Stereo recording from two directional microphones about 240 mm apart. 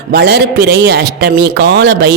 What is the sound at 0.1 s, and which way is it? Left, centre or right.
Speech, right.